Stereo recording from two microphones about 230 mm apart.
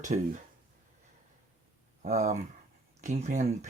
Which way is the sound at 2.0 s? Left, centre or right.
Right.